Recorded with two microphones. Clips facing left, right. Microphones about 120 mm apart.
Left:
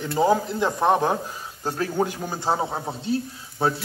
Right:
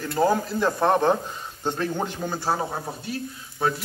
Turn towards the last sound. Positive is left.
turn(degrees=30)  # may be behind; listen again after turning